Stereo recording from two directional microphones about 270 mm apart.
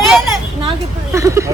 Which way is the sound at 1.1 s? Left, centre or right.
Centre.